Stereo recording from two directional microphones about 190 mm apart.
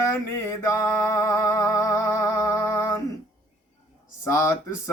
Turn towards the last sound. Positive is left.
turn(degrees=15)  # may be behind; listen again after turning